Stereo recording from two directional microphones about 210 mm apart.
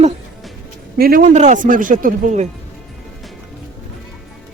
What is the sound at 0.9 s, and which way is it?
Speech, 45° right (ahead or behind).